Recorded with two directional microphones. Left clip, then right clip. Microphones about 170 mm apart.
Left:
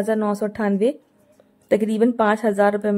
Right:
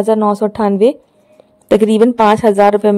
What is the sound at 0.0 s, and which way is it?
Speech, 30° right (ahead or behind).